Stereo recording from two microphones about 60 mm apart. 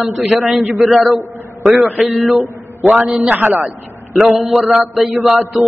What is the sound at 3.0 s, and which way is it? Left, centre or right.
Speech, centre.